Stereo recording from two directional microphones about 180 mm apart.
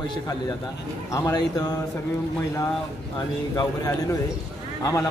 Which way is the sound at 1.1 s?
20° left (ahead or behind).